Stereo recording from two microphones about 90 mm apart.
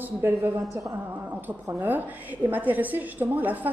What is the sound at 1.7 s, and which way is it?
A woman's voice, 20° right (ahead or behind).